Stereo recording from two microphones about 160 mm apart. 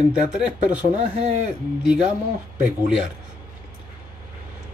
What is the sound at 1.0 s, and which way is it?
Speech, 45° right (ahead or behind).